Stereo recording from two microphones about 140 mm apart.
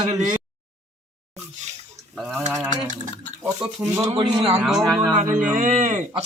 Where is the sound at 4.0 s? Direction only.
20° right (ahead or behind).